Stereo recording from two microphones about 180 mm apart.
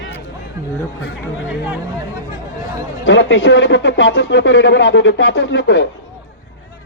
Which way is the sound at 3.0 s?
90° left.